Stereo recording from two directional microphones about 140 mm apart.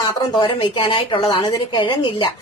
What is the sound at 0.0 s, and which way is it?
Speech, 30° left (ahead or behind).